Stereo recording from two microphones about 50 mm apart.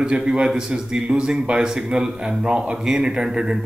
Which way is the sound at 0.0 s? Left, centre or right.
Centre.